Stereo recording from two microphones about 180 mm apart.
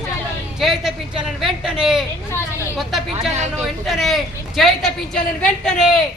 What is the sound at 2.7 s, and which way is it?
A woman's voice, centre (ahead or behind).